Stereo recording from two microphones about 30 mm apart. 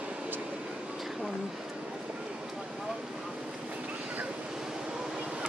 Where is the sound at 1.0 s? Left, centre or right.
Centre.